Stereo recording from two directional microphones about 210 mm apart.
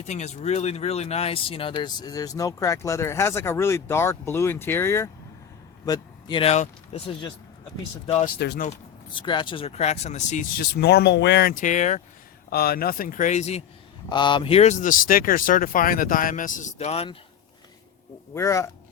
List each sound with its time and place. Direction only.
0.0 s speech: 30° left (ahead or behind)
8.4 s a man's voice: 50° left (ahead or behind)
9.1 s speech: 20° left (ahead or behind)
12.5 s a man's voice: 45° left (ahead or behind); by 13.7 s 30° left (ahead or behind)
14.1 s speech: 20° left (ahead or behind)
18.3 s speech: 15° left (ahead or behind)